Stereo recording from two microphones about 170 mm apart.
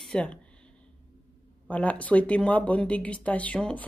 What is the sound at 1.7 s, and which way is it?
Speech, 10° left (ahead or behind).